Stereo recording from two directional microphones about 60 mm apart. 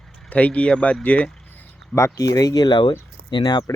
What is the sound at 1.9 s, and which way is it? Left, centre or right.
Speech, left.